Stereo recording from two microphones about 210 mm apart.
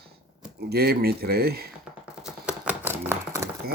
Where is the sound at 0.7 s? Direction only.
50° right (ahead or behind).